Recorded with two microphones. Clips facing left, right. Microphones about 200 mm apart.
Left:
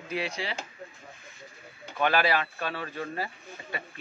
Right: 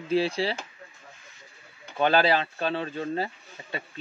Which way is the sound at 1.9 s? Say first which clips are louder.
Right 3 dB; 30° right (ahead or behind).